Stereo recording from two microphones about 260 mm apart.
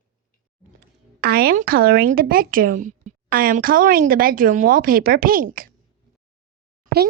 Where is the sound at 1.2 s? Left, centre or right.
Right.